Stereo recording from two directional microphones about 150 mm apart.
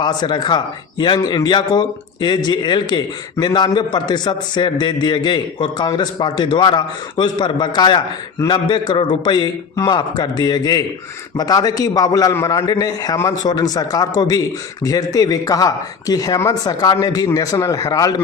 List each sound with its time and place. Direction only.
0.0 s a man's voice: 30° left (ahead or behind)